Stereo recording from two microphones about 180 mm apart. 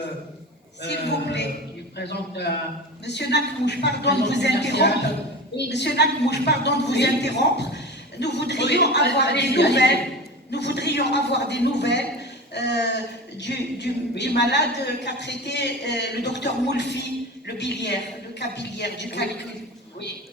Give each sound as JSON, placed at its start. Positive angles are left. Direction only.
{"t": 0.8, "sound": "a woman's voice", "side_deg": 70}